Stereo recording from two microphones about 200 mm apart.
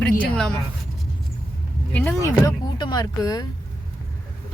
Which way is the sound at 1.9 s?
10° left (ahead or behind).